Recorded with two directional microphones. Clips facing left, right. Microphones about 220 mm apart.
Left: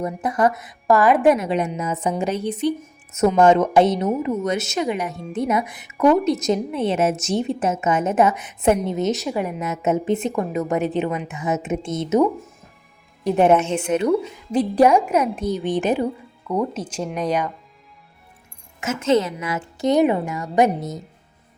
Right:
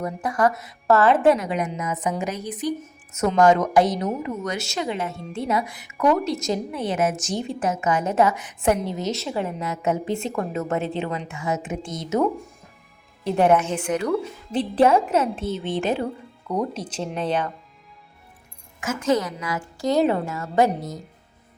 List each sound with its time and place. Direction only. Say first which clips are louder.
0.0 s a woman's voice: left 2 dB; 20° left (ahead or behind)
13.2 s a woman's voice: left 3 dB; 20° left (ahead or behind)
14.1 s a woman's voice: left 4 dB; 10° left (ahead or behind)
18.8 s a woman's voice: left 3 dB; 25° left (ahead or behind)